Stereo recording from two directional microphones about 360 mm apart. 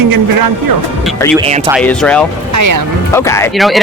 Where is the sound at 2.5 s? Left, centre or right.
Right.